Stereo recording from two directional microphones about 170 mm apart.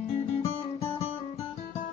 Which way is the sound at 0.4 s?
35° left (ahead or behind).